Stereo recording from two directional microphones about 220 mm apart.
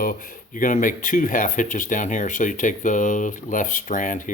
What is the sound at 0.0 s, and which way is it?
Speech, 40° left (ahead or behind).